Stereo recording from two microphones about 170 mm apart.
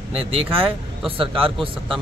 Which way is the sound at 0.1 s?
35° right (ahead or behind).